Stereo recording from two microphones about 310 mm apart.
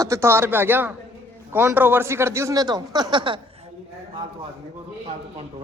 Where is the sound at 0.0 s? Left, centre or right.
Centre.